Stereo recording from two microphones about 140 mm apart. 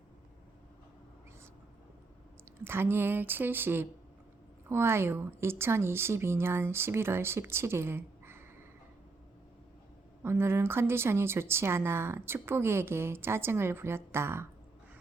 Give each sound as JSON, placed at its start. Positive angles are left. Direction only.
{"t": 2.6, "sound": "a woman's voice", "side_deg": -15}
{"t": 10.2, "sound": "a woman's voice", "side_deg": -15}